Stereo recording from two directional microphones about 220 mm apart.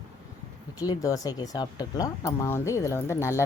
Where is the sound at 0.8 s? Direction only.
15° left (ahead or behind).